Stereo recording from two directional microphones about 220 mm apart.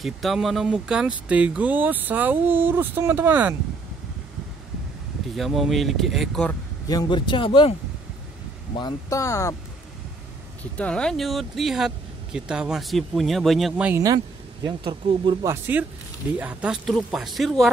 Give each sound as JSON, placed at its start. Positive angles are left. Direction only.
{"t": 0.0, "sound": "speech", "side_deg": 0}
{"t": 5.3, "sound": "speech", "side_deg": 0}
{"t": 6.9, "sound": "a man's voice", "side_deg": 20}
{"t": 8.7, "sound": "speech", "side_deg": 15}
{"t": 10.8, "sound": "speech", "side_deg": 5}